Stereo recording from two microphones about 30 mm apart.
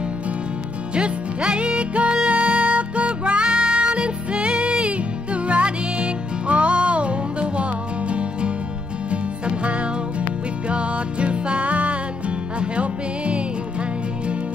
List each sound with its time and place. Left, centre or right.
0.9 s music: right
10.7 s music: right